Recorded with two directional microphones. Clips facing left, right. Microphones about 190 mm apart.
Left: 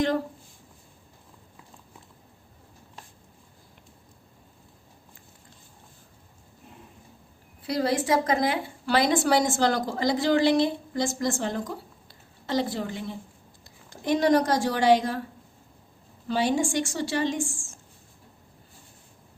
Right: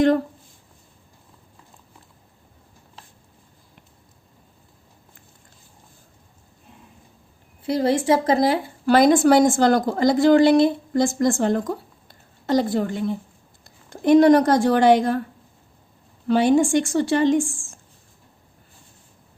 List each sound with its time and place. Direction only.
7.6 s a woman's voice: 25° right (ahead or behind)
8.9 s a woman's voice: 50° right (ahead or behind)
12.0 s a sound: 45° right (ahead or behind)
13.7 s speech: 55° right (ahead or behind)
16.2 s a woman's voice: 55° right (ahead or behind)